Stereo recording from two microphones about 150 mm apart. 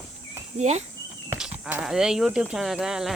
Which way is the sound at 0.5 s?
50° right (ahead or behind).